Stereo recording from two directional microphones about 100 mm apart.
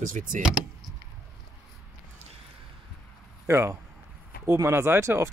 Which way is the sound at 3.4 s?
25° right (ahead or behind).